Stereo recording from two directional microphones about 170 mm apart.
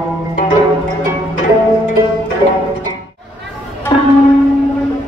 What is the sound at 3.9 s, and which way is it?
Music, 30° left (ahead or behind).